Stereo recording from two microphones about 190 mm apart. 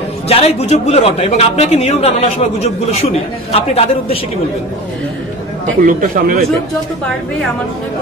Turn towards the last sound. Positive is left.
turn(degrees=-45)  # may be behind; listen again after turning